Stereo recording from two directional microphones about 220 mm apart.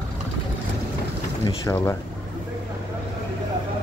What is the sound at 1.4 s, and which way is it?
Speech, 15° left (ahead or behind).